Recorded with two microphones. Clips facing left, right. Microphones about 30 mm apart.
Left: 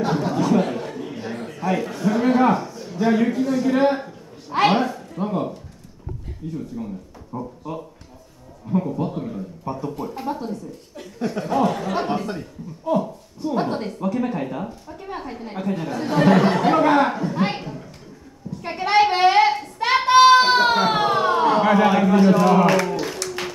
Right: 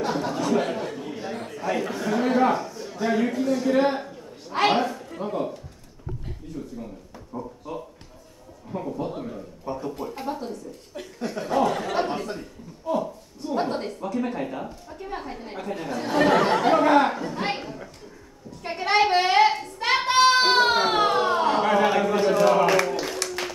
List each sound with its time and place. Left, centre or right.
0.0 s a sound: centre
1.9 s a man's voice: centre
2.1 s a man's voice: centre
7.3 s speech: centre
8.7 s a woman's voice: centre
12.3 s a man's voice: centre
12.9 s a woman's voice: centre
18.6 s child singing: centre
22.8 s a sound: centre
23.4 s music: centre